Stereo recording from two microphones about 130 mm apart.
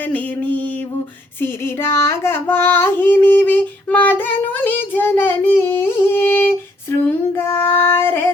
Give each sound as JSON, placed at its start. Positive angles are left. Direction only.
{"t": 0.1, "sound": "a sound", "side_deg": 10}
{"t": 1.4, "sound": "female singing", "side_deg": 20}
{"t": 7.1, "sound": "child singing", "side_deg": 20}